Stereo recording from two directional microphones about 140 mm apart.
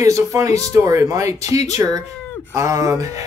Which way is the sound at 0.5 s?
50° left (ahead or behind).